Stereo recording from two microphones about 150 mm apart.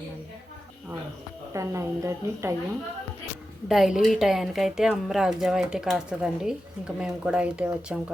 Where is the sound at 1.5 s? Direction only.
20° right (ahead or behind).